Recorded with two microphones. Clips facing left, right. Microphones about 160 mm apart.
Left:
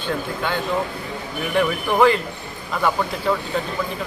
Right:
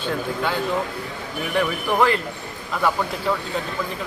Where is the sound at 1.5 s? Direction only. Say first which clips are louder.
Left 2 dB; centre (ahead or behind).